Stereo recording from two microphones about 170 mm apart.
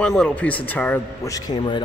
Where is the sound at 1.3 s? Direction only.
25° left (ahead or behind).